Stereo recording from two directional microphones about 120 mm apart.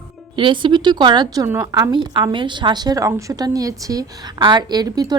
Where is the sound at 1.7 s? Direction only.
35° right (ahead or behind).